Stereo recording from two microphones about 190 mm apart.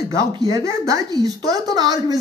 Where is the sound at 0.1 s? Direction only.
20° right (ahead or behind).